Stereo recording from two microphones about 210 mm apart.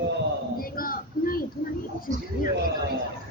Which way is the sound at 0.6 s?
45° left (ahead or behind).